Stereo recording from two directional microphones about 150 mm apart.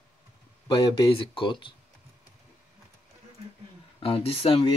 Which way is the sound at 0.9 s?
35° left (ahead or behind).